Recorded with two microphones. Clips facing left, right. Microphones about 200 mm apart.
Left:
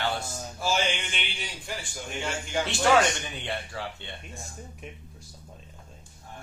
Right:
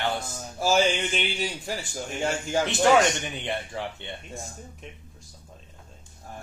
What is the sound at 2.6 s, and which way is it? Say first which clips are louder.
Speech: right 2 dB; 20° right (ahead or behind).